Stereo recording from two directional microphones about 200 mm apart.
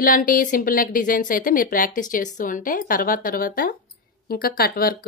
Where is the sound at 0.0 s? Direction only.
45° left (ahead or behind).